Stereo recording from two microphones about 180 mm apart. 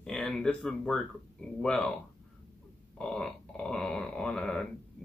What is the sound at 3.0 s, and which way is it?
Speech, 5° left (ahead or behind).